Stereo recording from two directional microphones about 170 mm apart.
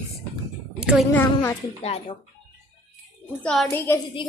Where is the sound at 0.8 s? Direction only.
5° right (ahead or behind).